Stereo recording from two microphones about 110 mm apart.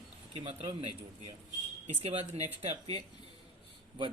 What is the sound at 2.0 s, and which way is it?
Speech, 70° right (ahead or behind).